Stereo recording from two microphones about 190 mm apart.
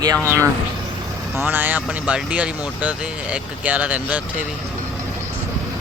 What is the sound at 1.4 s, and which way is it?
Speech, 10° right (ahead or behind).